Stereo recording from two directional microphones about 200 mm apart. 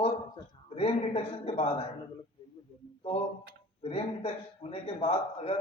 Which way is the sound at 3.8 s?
30° left (ahead or behind).